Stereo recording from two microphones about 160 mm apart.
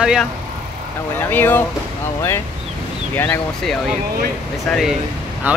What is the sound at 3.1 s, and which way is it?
Speech, 10° left (ahead or behind).